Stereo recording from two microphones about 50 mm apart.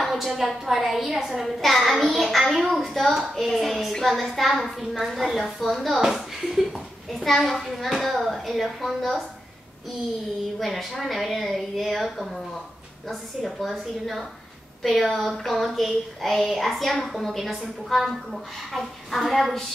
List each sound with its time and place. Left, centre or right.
0.0 s a woman's voice: centre
10.6 s a woman's voice: centre